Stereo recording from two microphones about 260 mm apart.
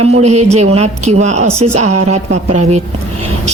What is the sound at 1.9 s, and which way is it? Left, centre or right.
Speech, right.